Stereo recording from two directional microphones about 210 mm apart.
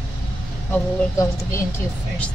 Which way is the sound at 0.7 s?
15° left (ahead or behind).